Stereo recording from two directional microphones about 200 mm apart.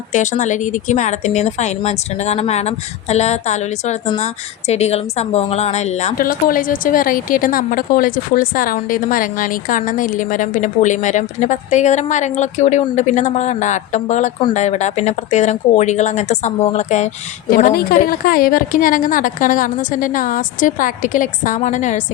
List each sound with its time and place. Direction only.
0.1 s a woman's voice: 40° left (ahead or behind)
17.5 s a woman's voice: 45° left (ahead or behind)